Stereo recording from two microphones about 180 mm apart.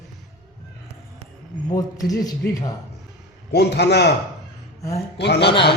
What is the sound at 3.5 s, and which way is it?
Speech, 70° left (ahead or behind).